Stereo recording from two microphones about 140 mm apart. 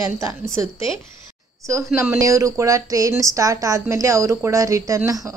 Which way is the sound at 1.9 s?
20° right (ahead or behind).